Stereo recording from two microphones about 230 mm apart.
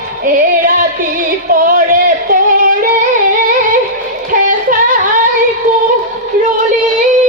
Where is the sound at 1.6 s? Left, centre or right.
Right.